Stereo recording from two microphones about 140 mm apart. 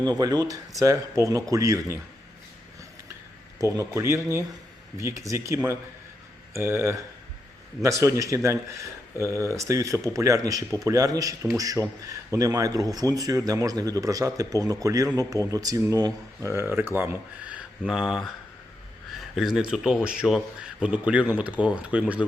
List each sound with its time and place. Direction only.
0.0 s speech: 30° right (ahead or behind)
3.6 s speech: 20° right (ahead or behind)